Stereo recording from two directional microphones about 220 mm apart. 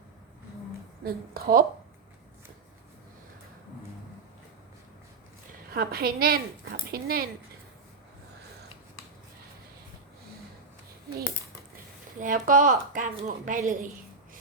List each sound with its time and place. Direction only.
1.0 s a woman's voice: 45° right (ahead or behind)
5.7 s a woman's voice: 40° right (ahead or behind)
12.2 s a woman's voice: 35° right (ahead or behind)